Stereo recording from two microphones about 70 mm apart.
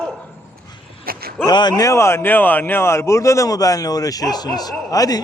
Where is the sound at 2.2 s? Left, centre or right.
Left.